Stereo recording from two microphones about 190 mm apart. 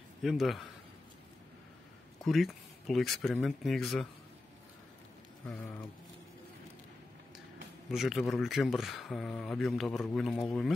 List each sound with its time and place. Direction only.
0.2 s speech: centre (ahead or behind)
2.2 s speech: centre (ahead or behind)
7.9 s speech: centre (ahead or behind)